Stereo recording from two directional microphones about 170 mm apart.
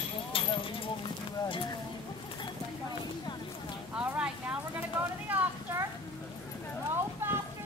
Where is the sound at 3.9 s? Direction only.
10° right (ahead or behind).